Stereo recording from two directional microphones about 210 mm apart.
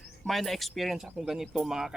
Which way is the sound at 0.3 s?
Centre (ahead or behind).